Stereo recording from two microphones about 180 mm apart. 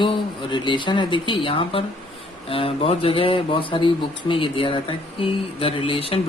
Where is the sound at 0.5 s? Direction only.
25° left (ahead or behind).